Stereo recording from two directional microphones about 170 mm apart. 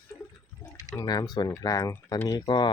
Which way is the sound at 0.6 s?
20° left (ahead or behind).